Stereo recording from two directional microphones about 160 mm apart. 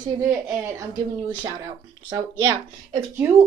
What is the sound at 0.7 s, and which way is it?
Speech, 25° right (ahead or behind).